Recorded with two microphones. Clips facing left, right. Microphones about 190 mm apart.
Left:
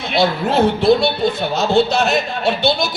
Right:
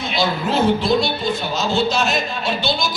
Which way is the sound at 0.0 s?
60° left (ahead or behind).